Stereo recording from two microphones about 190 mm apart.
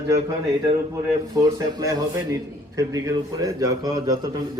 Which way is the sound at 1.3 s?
20° right (ahead or behind).